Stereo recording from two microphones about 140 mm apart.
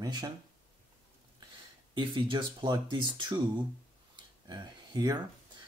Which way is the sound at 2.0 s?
35° right (ahead or behind).